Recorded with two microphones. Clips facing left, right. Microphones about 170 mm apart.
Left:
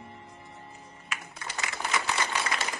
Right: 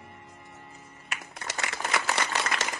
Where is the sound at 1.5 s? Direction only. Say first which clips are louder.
Right 1 dB; 70° right (ahead or behind).